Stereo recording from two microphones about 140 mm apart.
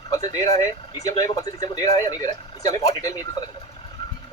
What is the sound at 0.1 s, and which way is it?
Speech, 30° left (ahead or behind).